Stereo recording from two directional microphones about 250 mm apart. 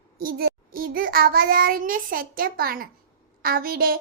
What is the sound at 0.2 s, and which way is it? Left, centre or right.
A child's voice, right.